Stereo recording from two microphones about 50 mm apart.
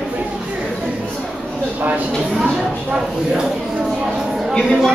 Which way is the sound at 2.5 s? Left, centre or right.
Centre.